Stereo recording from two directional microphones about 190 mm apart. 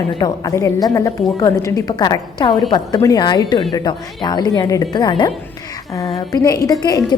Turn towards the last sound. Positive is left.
turn(degrees=20)  # may be behind; listen again after turning